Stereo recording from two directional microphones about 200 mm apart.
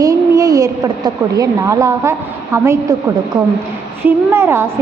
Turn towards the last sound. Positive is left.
turn(degrees=-10)  # may be behind; listen again after turning